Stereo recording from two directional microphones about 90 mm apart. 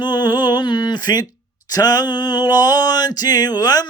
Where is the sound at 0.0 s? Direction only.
55° left (ahead or behind).